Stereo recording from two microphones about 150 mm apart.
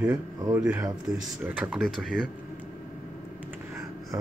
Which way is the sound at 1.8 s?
5° left (ahead or behind).